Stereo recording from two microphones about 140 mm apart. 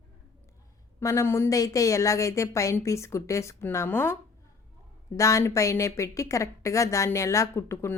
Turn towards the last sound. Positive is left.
turn(degrees=20)  # may be behind; listen again after turning